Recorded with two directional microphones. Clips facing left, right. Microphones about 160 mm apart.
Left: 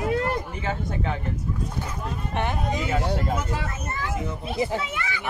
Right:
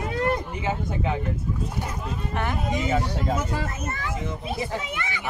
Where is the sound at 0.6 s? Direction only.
15° right (ahead or behind).